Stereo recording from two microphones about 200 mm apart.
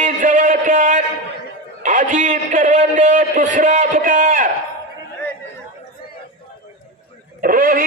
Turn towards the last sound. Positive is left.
turn(degrees=-45)  # may be behind; listen again after turning